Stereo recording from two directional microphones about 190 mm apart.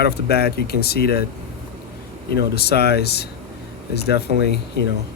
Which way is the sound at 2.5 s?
55° left (ahead or behind).